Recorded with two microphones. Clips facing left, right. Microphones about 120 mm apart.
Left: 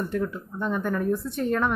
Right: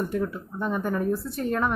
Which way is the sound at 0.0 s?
5° right (ahead or behind).